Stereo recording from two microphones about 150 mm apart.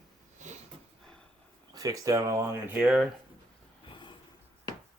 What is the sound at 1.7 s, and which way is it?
Speech, 25° right (ahead or behind).